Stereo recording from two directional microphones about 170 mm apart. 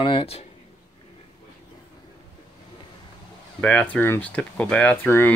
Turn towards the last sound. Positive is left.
turn(degrees=10)  # may be behind; listen again after turning